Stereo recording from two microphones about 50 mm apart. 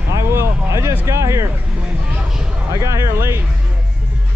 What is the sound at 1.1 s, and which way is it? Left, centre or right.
Speech, right.